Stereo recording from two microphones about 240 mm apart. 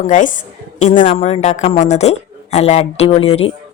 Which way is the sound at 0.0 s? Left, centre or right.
Left.